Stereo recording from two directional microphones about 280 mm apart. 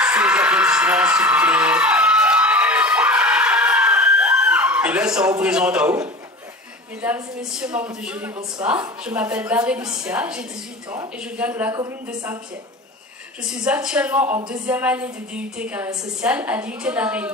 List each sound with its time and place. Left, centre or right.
0.0 s a sound: centre
7.0 s speech: centre
13.7 s speech: centre